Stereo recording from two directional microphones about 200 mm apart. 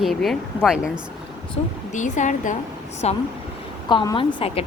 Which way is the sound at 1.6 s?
30° left (ahead or behind).